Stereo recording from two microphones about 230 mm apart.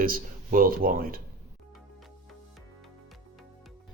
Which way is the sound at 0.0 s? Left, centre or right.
Right.